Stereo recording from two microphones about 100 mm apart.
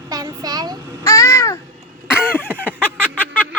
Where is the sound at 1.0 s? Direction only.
30° left (ahead or behind).